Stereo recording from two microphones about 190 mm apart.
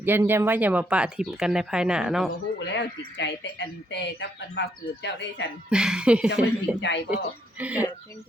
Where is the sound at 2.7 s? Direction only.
75° left (ahead or behind).